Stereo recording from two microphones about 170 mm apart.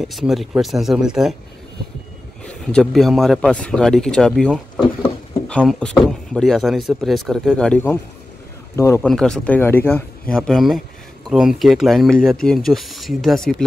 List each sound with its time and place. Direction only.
0.0 s speech: centre (ahead or behind)
2.4 s speech: 5° left (ahead or behind)
5.5 s speech: 5° left (ahead or behind)
9.0 s speech: 5° left (ahead or behind)